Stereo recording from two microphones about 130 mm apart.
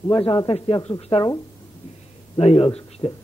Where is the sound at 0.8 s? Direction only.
50° left (ahead or behind).